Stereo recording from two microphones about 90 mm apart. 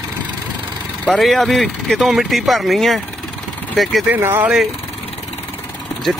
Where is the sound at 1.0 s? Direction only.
5° left (ahead or behind).